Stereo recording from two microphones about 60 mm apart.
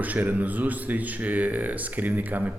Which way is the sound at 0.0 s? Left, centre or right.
Right.